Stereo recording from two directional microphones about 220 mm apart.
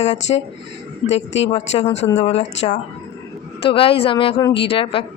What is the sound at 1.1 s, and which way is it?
Speech, 55° left (ahead or behind).